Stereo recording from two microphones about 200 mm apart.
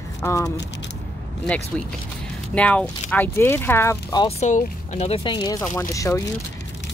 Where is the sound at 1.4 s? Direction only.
5° left (ahead or behind).